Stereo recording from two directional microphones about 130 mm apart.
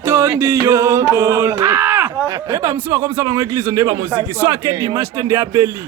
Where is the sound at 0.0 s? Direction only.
20° right (ahead or behind).